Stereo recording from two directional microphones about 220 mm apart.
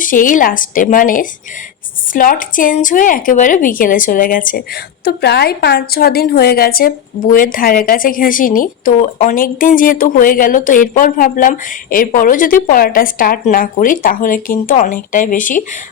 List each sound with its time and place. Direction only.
0.0 s a woman's voice: 40° left (ahead or behind)